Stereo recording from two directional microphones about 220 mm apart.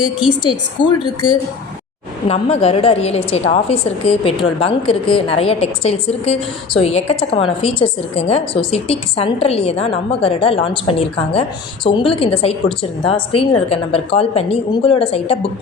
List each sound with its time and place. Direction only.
0.8 s a woman's voice: 20° left (ahead or behind)